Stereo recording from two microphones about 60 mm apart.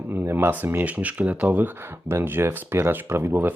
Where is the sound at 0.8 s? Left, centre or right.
Right.